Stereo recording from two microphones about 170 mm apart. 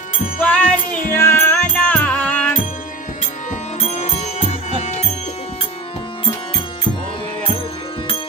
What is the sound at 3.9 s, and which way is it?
Music, 40° left (ahead or behind).